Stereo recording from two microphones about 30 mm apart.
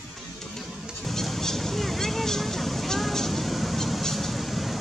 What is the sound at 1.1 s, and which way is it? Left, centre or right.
Vehicle, centre.